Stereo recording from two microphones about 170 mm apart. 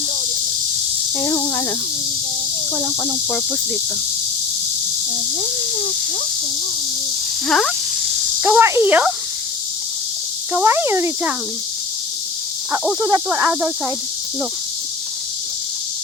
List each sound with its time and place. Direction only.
1.2 s insect: 15° left (ahead or behind)
2.7 s speech: 20° left (ahead or behind)
7.4 s frog: 5° left (ahead or behind)
8.4 s speech: 15° right (ahead or behind)
10.5 s speech: 15° right (ahead or behind)
13.0 s speech: 20° right (ahead or behind)